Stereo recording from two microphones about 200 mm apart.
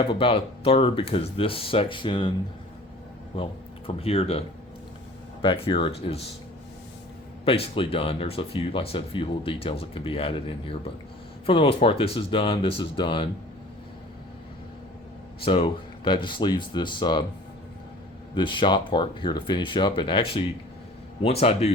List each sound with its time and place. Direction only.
0.1 s speech: 25° left (ahead or behind)
3.8 s speech: 30° left (ahead or behind)
7.4 s speech: 30° left (ahead or behind)
15.4 s speech: 25° left (ahead or behind)
18.3 s speech: 25° left (ahead or behind)